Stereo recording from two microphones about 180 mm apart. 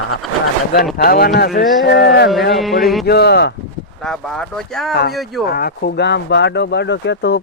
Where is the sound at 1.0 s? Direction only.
60° left (ahead or behind).